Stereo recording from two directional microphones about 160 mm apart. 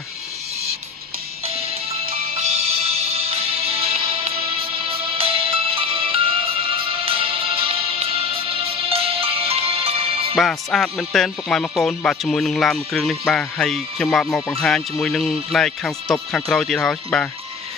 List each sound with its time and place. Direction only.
1.4 s music: 40° right (ahead or behind)
10.3 s speech: centre (ahead or behind)